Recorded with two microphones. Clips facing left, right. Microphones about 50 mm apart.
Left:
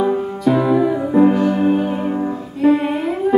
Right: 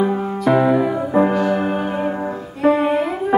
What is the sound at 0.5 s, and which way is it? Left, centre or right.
Music, right.